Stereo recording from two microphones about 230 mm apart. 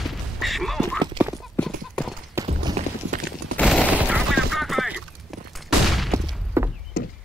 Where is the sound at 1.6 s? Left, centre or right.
Centre.